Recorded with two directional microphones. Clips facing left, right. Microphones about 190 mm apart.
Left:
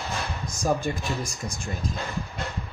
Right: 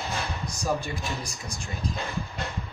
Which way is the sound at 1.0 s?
Centre (ahead or behind).